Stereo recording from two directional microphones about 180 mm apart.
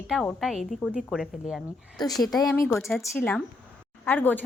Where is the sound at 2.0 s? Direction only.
20° left (ahead or behind).